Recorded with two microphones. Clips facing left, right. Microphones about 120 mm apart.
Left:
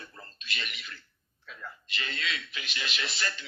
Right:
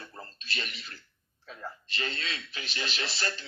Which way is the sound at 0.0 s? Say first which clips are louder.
Right 3 dB; 35° right (ahead or behind).